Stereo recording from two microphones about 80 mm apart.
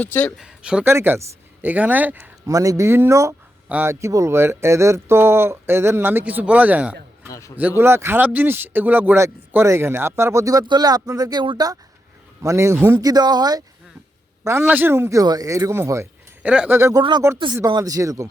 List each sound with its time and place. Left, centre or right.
0.0 s speech: centre
0.3 s speech: centre
0.9 s speech: right
2.5 s speech: right
7.3 s a man's voice: left
7.8 s speech: right
12.4 s speech: right
13.0 s speech: right
14.4 s a man's voice: right
15.2 s speech: right
16.4 s speech: centre
16.6 s speech: right
17.0 s speech: right
17.7 s speech: right